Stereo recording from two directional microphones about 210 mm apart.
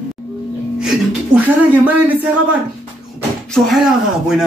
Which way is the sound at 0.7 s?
5° right (ahead or behind).